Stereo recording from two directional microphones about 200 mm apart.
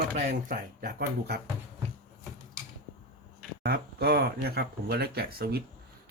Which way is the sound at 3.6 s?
50° right (ahead or behind).